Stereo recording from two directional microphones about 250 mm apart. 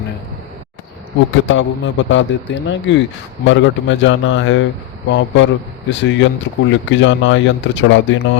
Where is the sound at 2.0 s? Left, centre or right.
Left.